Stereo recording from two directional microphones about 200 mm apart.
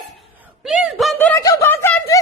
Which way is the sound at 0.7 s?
Centre (ahead or behind).